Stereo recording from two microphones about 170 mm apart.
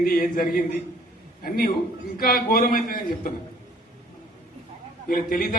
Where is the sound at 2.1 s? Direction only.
60° left (ahead or behind).